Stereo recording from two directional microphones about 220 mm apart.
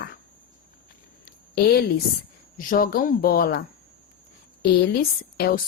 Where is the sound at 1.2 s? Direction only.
45° left (ahead or behind).